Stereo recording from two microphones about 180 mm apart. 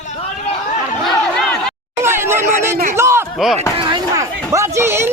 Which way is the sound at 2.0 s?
15° right (ahead or behind).